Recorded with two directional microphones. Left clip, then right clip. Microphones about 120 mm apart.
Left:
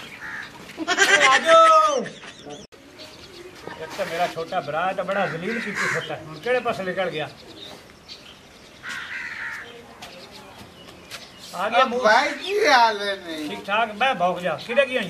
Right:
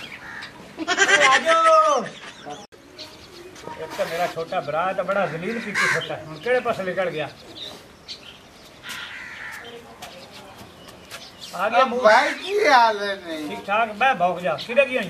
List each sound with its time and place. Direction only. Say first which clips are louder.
0.8 s bird: even; centre (ahead or behind)
3.9 s speech: even; 25° left (ahead or behind)
4.4 s a woman's voice: right 1 dB; centre (ahead or behind)
5.6 s speech: right 5 dB; 40° right (ahead or behind)
6.0 s speech: right 1 dB; 5° left (ahead or behind)
11.7 s a woman's voice: right 2 dB; centre (ahead or behind)